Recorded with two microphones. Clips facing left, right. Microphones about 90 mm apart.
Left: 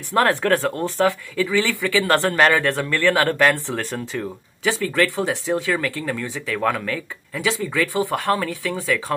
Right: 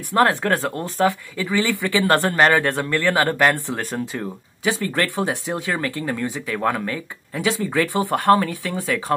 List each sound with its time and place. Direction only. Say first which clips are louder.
0.2 s speech: even; 20° right (ahead or behind)